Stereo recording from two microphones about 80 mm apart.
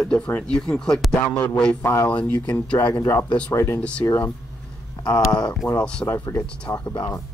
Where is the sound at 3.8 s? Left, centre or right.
Centre.